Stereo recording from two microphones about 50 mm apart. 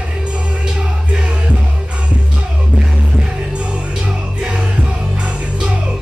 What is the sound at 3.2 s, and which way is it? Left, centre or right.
Music, centre.